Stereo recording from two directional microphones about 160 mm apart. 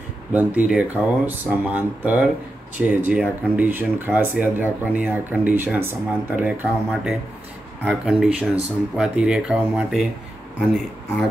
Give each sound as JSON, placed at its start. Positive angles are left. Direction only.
{"t": 0.3, "sound": "speech", "side_deg": -10}